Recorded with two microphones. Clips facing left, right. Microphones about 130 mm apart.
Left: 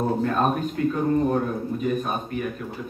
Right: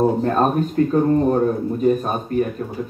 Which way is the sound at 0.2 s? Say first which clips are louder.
Right 4 dB; 40° right (ahead or behind).